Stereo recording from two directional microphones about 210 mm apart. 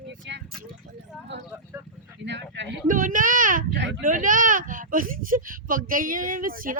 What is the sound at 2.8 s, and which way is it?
Speech, 40° right (ahead or behind).